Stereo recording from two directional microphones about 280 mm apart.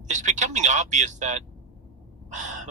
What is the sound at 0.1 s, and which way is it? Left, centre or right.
Speech, right.